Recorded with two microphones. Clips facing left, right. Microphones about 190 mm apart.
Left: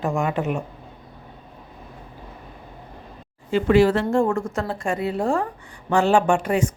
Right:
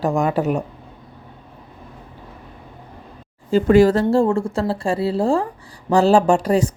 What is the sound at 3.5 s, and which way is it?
Speech, 40° right (ahead or behind).